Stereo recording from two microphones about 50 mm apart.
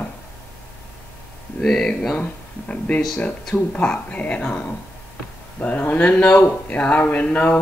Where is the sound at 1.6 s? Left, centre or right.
Centre.